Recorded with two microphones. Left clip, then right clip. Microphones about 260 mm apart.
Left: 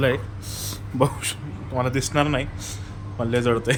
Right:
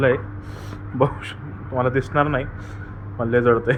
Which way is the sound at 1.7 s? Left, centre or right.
Centre.